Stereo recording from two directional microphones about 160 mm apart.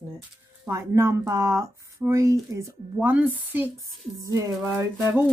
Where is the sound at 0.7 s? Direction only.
15° right (ahead or behind).